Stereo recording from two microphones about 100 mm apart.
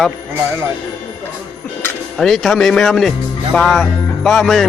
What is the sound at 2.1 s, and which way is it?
Speech, 5° left (ahead or behind).